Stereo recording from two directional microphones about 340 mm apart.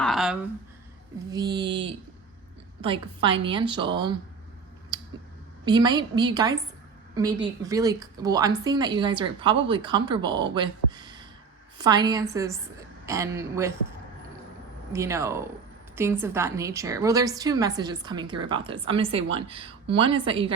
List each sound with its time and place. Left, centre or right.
0.0 s a sound: centre
1.3 s a woman's voice: centre
4.9 s a sound: centre
5.6 s a woman's voice: centre
7.6 s a woman's voice: centre
14.9 s a woman's voice: centre